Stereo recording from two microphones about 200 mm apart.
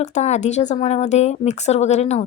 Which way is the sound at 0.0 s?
35° left (ahead or behind).